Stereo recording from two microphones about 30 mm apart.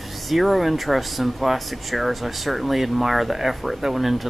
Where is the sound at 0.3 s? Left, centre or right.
Centre.